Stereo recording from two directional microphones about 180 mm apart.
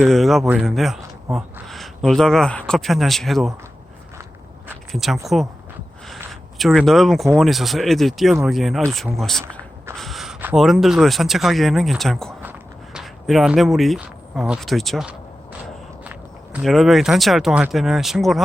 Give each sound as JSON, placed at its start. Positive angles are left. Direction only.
{"t": 0.0, "sound": "speech", "side_deg": 0}
{"t": 4.9, "sound": "speech", "side_deg": 0}
{"t": 6.6, "sound": "speech", "side_deg": 0}
{"t": 12.4, "sound": "a sound", "side_deg": -5}
{"t": 15.6, "sound": "speech", "side_deg": -5}